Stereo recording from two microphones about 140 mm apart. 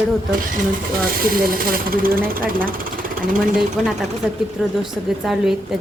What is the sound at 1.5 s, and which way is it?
Speech, 90° right.